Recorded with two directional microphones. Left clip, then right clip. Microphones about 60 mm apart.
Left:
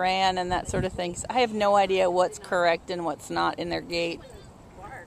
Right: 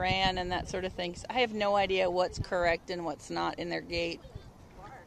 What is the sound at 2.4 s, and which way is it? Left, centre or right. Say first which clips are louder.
Speech: left 6 dB; right.